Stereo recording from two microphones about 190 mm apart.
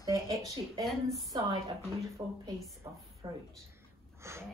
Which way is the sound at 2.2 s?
15° right (ahead or behind).